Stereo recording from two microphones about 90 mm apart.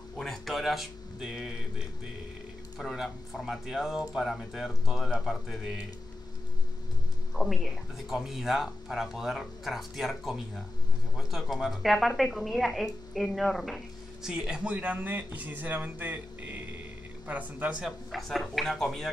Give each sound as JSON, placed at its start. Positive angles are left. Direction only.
{"t": 0.2, "sound": "a sound", "side_deg": 0}
{"t": 2.8, "sound": "speech", "side_deg": 5}
{"t": 7.3, "sound": "speech", "side_deg": 0}
{"t": 18.1, "sound": "speech", "side_deg": 0}